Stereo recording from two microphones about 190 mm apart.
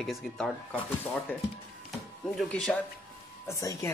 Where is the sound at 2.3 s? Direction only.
5° left (ahead or behind).